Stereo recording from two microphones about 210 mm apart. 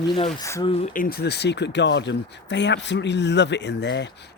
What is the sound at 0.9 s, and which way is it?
Speech, 45° left (ahead or behind).